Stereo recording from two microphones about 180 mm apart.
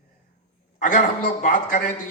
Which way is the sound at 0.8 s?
45° left (ahead or behind).